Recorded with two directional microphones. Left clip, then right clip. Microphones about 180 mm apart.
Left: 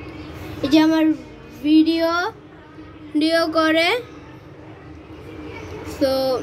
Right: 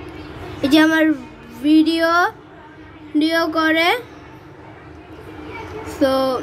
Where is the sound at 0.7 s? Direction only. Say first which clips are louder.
Right 2 dB; 45° right (ahead or behind).